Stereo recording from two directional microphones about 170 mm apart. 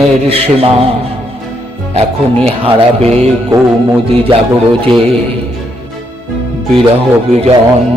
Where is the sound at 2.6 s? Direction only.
35° right (ahead or behind).